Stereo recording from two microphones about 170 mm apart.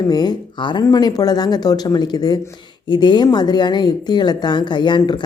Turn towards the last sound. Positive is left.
turn(degrees=25)  # may be behind; listen again after turning